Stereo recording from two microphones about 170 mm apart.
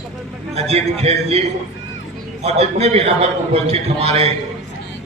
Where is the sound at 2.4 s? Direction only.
40° right (ahead or behind).